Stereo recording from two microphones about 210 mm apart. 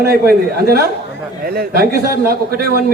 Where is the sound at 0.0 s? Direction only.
45° right (ahead or behind).